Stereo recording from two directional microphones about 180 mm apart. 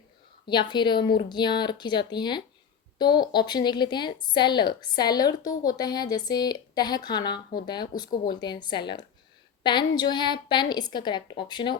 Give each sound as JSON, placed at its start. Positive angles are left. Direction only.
{"t": 0.4, "sound": "a woman's voice", "side_deg": 25}